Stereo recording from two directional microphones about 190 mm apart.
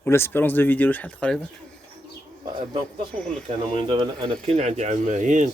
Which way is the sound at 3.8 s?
30° right (ahead or behind).